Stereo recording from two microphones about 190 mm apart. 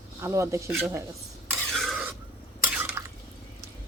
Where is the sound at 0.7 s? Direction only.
Centre (ahead or behind).